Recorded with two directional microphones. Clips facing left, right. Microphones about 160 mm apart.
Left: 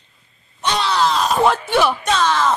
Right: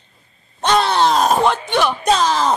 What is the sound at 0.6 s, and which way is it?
Groan, 50° right (ahead or behind).